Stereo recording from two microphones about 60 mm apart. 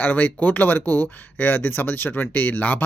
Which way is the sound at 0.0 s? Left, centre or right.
Left.